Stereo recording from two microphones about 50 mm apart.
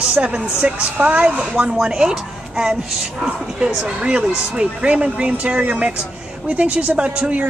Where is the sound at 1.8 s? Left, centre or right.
Centre.